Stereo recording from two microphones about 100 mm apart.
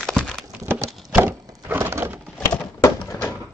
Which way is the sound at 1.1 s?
20° right (ahead or behind).